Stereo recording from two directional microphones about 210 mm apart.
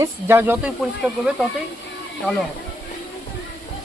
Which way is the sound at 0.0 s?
10° right (ahead or behind).